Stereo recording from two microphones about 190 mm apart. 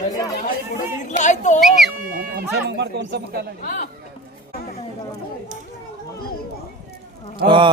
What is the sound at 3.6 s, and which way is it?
Speech, 45° left (ahead or behind).